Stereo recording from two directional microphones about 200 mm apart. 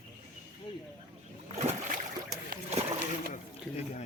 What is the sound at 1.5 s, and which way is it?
Boat, 35° right (ahead or behind).